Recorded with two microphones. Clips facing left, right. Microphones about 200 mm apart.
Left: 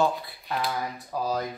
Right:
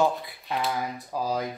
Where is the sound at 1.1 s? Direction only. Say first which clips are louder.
Even; 15° right (ahead or behind).